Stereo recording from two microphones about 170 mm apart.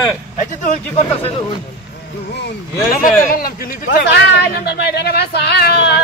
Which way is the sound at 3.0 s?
55° left (ahead or behind).